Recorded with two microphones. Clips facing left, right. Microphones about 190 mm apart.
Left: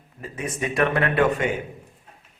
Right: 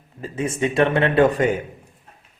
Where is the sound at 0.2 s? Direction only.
30° right (ahead or behind).